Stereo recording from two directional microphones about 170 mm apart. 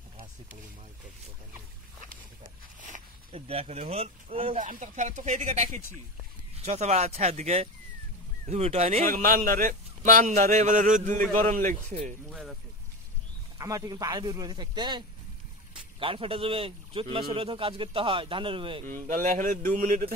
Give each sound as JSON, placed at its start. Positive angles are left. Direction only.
{"t": 3.3, "sound": "a man's voice", "side_deg": -35}
{"t": 4.6, "sound": "a man's voice", "side_deg": -50}
{"t": 9.0, "sound": "a man's voice", "side_deg": -55}
{"t": 12.3, "sound": "speech", "side_deg": 0}
{"t": 13.6, "sound": "a man's voice", "side_deg": -20}
{"t": 18.9, "sound": "a man's voice", "side_deg": -50}